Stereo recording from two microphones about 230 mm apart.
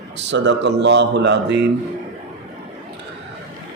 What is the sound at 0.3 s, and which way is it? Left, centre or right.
Speech, right.